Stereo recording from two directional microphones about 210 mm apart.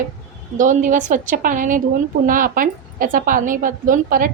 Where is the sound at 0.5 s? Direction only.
35° right (ahead or behind).